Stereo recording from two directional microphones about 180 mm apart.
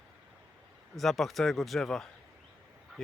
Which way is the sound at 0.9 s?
Centre (ahead or behind).